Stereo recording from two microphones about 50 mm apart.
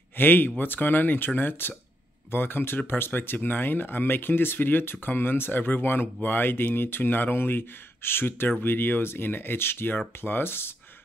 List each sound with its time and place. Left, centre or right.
0.2 s speech: left